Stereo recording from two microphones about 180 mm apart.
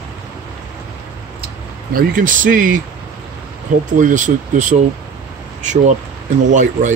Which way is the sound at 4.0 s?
45° right (ahead or behind).